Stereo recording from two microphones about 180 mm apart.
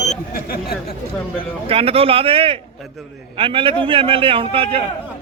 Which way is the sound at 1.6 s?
30° right (ahead or behind).